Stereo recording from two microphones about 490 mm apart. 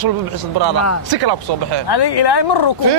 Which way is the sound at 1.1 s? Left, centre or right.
Right.